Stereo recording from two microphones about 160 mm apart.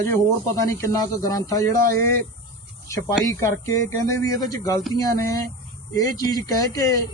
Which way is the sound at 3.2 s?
20° left (ahead or behind).